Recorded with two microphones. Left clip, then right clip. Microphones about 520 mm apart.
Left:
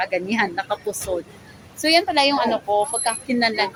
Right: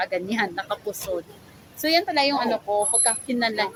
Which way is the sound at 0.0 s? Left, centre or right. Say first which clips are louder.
Left 3 dB; right.